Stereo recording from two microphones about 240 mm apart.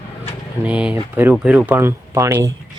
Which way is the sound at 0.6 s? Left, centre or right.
Centre.